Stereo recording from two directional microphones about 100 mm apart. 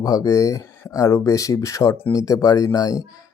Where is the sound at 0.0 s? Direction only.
35° left (ahead or behind).